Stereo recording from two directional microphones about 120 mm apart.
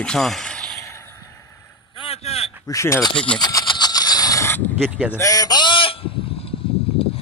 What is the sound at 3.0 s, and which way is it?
Speech, 45° left (ahead or behind).